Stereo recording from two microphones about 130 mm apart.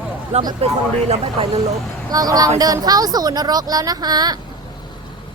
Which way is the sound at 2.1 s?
30° right (ahead or behind).